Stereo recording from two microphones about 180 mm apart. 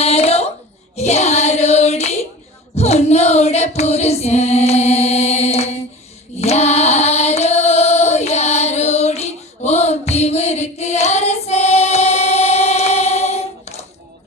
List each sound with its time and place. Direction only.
0.0 s a sound: 35° left (ahead or behind)
0.9 s hands: 35° left (ahead or behind)
2.7 s child singing: 35° left (ahead or behind)
6.4 s female singing: 35° left (ahead or behind)